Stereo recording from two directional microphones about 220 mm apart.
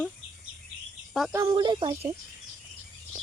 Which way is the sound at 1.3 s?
15° right (ahead or behind).